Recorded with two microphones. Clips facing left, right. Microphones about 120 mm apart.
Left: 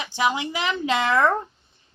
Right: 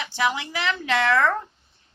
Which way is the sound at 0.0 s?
20° left (ahead or behind).